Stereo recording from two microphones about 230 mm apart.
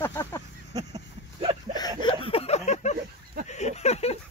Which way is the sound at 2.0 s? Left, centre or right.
Left.